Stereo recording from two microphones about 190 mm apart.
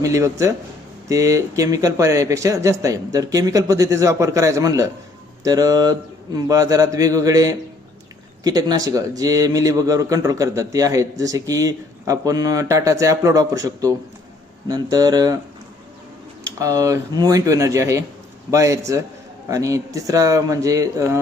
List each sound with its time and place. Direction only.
0.0 s a man's voice: 15° right (ahead or behind)
16.4 s a man's voice: 15° right (ahead or behind)